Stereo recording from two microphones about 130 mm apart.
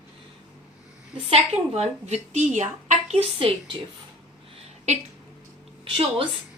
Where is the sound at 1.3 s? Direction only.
55° right (ahead or behind).